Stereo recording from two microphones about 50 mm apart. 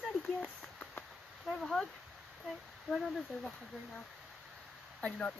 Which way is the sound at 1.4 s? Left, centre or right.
Centre.